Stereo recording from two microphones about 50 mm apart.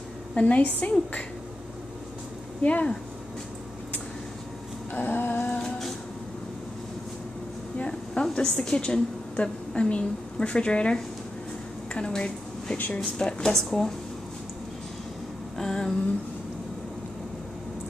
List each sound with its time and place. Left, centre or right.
0.3 s a woman's voice: left
2.6 s a woman's voice: left
4.9 s a sound: left
5.6 s music: centre
7.7 s a woman's voice: left
11.9 s a sound: centre
12.9 s speech: centre
13.7 s speech: centre
15.5 s a sound: centre